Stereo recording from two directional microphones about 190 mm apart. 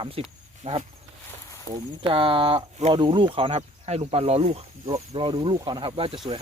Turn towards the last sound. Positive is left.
turn(degrees=-30)  # may be behind; listen again after turning